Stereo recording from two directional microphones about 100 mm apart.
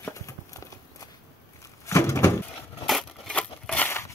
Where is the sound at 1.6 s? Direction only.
30° left (ahead or behind).